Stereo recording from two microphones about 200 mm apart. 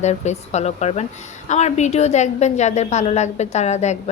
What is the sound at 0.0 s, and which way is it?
A woman's voice, 35° left (ahead or behind).